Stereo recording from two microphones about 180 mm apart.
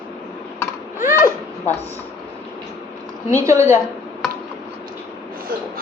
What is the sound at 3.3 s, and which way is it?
Speech, 15° right (ahead or behind).